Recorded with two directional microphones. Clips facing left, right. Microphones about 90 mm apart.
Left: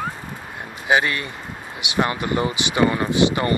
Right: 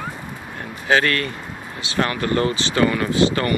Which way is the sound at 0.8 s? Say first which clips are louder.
Right 1 dB; 15° left (ahead or behind).